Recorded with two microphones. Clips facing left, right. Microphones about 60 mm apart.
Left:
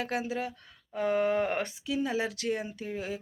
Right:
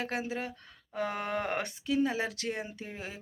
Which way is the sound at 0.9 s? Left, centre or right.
Centre.